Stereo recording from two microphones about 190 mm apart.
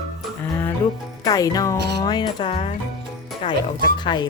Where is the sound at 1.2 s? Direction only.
20° left (ahead or behind).